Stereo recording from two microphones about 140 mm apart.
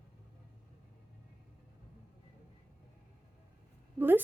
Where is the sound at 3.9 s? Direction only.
15° right (ahead or behind).